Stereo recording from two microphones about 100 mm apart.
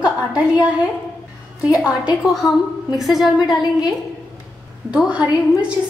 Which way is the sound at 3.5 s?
40° left (ahead or behind).